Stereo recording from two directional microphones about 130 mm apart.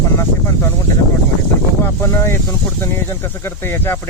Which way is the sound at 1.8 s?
20° left (ahead or behind).